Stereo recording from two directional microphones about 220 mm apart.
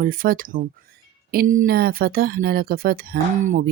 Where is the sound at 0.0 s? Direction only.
40° right (ahead or behind).